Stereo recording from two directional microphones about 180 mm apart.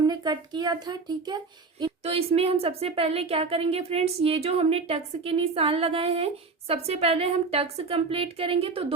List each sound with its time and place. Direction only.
0.0 s a woman's voice: 20° right (ahead or behind)